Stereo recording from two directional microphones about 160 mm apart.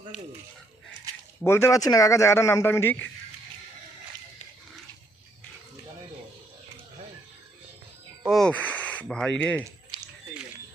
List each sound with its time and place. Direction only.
1.5 s a man's voice: 15° left (ahead or behind)
8.2 s speech: centre (ahead or behind)
9.9 s a sound: 30° right (ahead or behind)